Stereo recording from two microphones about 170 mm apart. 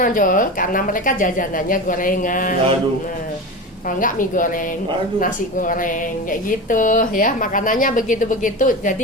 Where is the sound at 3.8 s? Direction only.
50° left (ahead or behind).